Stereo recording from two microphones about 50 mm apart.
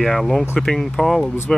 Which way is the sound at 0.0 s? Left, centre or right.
Centre.